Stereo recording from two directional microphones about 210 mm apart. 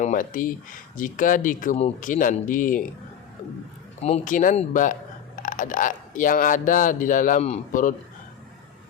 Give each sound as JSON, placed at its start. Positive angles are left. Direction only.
{"t": 0.0, "sound": "speech", "side_deg": 40}
{"t": 4.0, "sound": "speech", "side_deg": 35}